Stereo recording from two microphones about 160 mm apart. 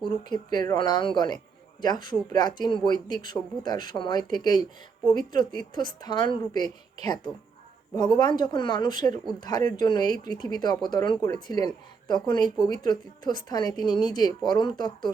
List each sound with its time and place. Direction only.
0.0 s speech: 25° left (ahead or behind)
7.9 s speech: 25° left (ahead or behind)